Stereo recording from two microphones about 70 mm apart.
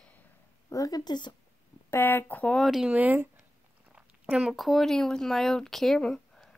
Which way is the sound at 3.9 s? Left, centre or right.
Centre.